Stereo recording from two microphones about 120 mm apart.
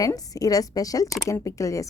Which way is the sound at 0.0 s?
30° left (ahead or behind).